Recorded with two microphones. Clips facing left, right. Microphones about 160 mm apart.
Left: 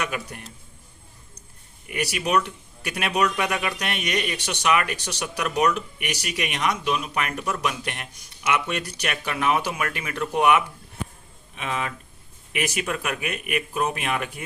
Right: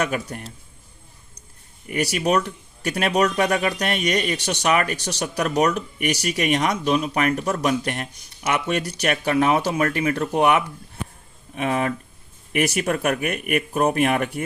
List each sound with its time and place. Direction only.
0.0 s speech: 40° right (ahead or behind)
1.9 s speech: 40° right (ahead or behind)
11.5 s speech: 45° right (ahead or behind)